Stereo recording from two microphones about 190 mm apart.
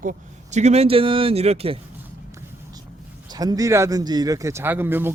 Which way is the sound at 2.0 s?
15° right (ahead or behind).